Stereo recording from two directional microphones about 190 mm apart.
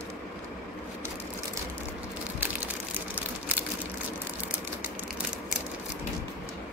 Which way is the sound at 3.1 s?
10° right (ahead or behind).